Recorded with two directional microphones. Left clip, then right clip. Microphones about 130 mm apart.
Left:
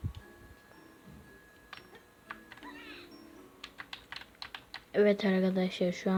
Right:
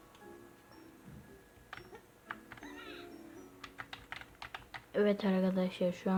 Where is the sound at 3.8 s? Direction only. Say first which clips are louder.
Left 1 dB; 10° left (ahead or behind).